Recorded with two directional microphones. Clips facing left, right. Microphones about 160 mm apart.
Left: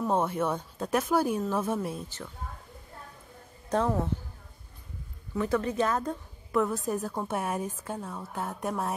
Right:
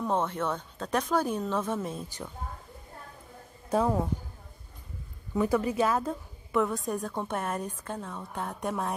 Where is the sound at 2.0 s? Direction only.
15° right (ahead or behind).